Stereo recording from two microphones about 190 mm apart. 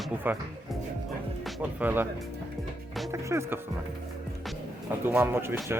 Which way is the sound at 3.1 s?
15° right (ahead or behind).